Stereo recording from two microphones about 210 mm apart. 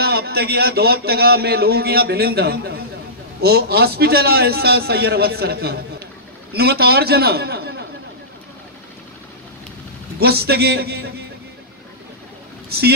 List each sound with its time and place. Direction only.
0.0 s a man's voice: 50° right (ahead or behind)
10.2 s a man's voice: 50° right (ahead or behind)
12.6 s vehicle: 50° right (ahead or behind)